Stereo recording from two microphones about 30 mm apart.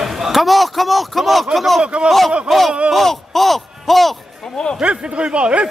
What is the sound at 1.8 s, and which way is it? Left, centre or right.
Speech, right.